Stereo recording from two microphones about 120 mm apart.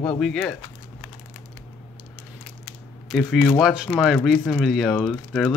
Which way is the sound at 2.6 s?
Centre (ahead or behind).